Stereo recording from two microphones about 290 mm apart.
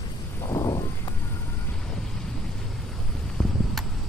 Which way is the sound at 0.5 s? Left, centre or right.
Centre.